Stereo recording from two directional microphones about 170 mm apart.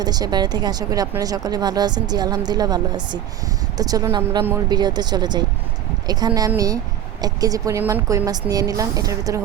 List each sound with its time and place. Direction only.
0.0 s speech: 25° right (ahead or behind)